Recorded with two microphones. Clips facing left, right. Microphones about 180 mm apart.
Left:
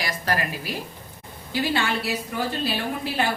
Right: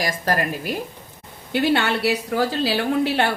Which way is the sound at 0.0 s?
45° right (ahead or behind).